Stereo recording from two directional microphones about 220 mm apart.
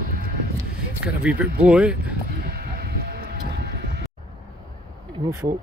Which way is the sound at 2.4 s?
45° right (ahead or behind).